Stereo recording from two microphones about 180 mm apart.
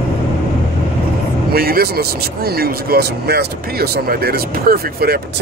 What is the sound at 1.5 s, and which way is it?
Speech, 55° right (ahead or behind).